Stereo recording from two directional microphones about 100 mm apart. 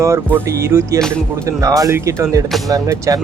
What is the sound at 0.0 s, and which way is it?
Speech, 25° right (ahead or behind).